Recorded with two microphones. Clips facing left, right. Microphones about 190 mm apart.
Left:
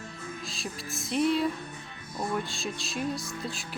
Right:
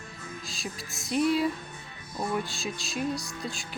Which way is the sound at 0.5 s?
Centre (ahead or behind).